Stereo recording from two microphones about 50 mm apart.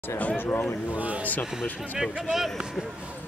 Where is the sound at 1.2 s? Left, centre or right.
Left.